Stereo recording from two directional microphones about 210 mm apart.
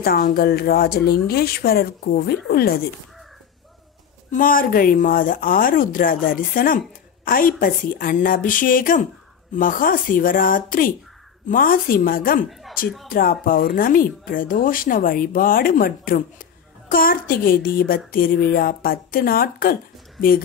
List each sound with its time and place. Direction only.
0.0 s speech: 45° left (ahead or behind)
4.3 s speech: 40° left (ahead or behind)
12.4 s speech: centre (ahead or behind)
13.1 s speech: 40° left (ahead or behind)